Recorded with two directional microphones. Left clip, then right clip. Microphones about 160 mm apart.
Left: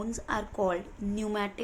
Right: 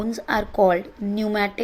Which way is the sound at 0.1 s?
40° right (ahead or behind).